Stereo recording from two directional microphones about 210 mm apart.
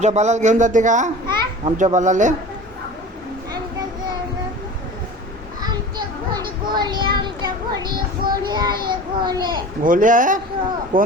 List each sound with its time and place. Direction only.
0.0 s a man's voice: 35° right (ahead or behind)
1.3 s children playing: 20° right (ahead or behind)
1.8 s a man's voice: 35° right (ahead or behind)
5.6 s child singing: 20° right (ahead or behind)
9.2 s a child's voice: 20° right (ahead or behind)
9.8 s a man's voice: 40° right (ahead or behind)